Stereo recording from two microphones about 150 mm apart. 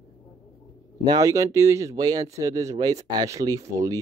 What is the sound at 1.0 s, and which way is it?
Speech, 25° right (ahead or behind).